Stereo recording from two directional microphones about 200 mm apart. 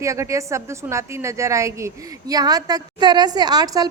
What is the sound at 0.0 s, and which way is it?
A woman's voice, 15° right (ahead or behind).